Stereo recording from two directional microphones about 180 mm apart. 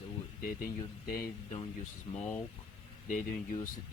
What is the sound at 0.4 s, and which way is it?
Speech, 55° left (ahead or behind).